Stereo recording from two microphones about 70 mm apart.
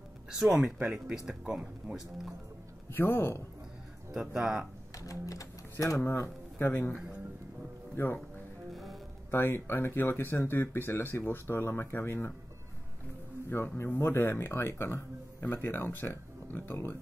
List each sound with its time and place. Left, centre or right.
0.3 s speech: centre
2.9 s speech: left
4.1 s speech: centre
4.9 s speech: left
9.3 s speech: left
13.5 s speech: left